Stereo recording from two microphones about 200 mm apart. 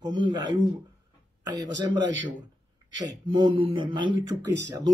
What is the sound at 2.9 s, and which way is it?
Speech, 25° right (ahead or behind).